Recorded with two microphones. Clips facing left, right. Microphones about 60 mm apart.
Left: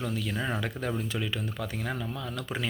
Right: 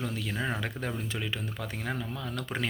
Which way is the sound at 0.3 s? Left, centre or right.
Centre.